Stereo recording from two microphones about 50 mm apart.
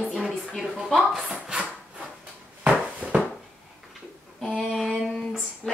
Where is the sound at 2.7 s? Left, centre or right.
Centre.